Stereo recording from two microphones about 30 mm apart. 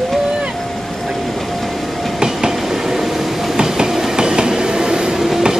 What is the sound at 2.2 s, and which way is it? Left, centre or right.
Train, right.